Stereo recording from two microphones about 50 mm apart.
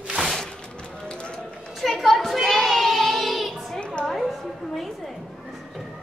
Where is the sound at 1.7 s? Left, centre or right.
Centre.